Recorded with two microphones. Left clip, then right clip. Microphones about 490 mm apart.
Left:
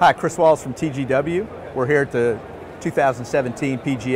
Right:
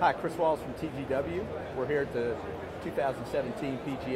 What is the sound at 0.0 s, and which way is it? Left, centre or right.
Speech, left.